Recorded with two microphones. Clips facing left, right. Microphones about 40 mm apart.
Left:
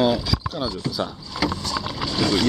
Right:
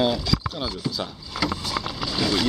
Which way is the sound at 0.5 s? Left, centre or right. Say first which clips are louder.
Left 2 dB; centre.